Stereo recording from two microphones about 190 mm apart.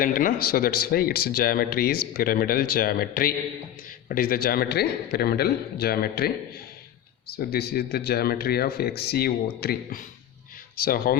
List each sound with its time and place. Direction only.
0.0 s speech: 45° left (ahead or behind)
7.3 s speech: 55° left (ahead or behind)